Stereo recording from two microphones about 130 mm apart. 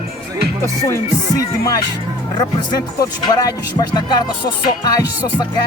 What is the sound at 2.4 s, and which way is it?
Speech, 30° left (ahead or behind).